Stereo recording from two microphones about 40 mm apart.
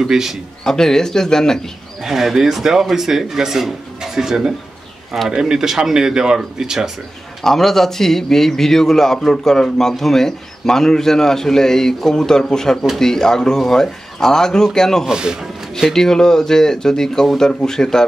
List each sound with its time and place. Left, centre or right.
0.1 s speech: centre
0.7 s a man's voice: centre
2.0 s speech: centre
7.4 s a man's voice: centre
15.0 s a man's voice: centre
15.9 s a man's voice: centre